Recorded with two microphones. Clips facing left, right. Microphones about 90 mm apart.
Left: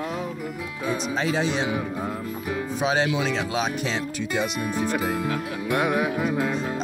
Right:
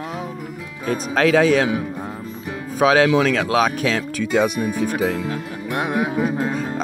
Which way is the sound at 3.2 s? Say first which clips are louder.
Right 7 dB; 55° right (ahead or behind).